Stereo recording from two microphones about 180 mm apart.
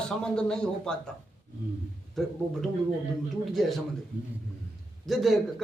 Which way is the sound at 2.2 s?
Centre (ahead or behind).